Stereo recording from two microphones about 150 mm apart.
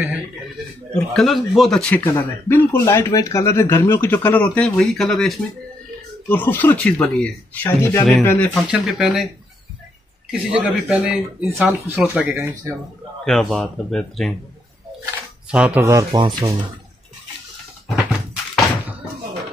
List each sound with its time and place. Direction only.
0.9 s a man's voice: centre (ahead or behind)
2.7 s speech: 20° left (ahead or behind); by 5.3 s centre (ahead or behind)
6.2 s speech: 15° left (ahead or behind)
8.6 s a man's voice: 5° right (ahead or behind)
10.3 s a man's voice: 5° right (ahead or behind)
11.6 s speech: 15° right (ahead or behind)
13.2 s a man's voice: centre (ahead or behind)
15.5 s speech: 5° right (ahead or behind)
15.8 s speech: 20° right (ahead or behind)
16.1 s speech: 30° right (ahead or behind)
17.8 s thunk: centre (ahead or behind)